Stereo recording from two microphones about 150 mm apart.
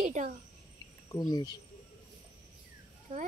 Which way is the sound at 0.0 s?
55° right (ahead or behind).